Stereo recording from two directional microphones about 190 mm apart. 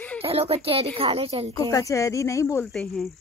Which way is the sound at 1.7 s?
15° left (ahead or behind).